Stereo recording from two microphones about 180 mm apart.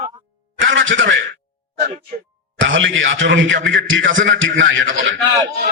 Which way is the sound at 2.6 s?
90° right.